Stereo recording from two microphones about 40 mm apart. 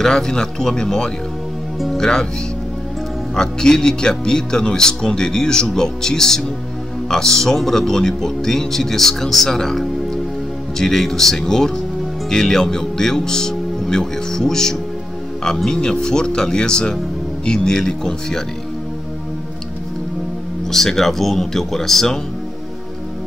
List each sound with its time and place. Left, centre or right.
0.0 s speech: centre
3.3 s speech: centre
20.7 s speech: centre